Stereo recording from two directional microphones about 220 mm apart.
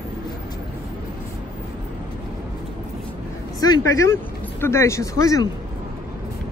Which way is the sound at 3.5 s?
15° left (ahead or behind).